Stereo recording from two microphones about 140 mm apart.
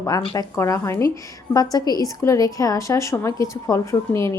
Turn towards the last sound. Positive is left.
turn(degrees=20)  # may be behind; listen again after turning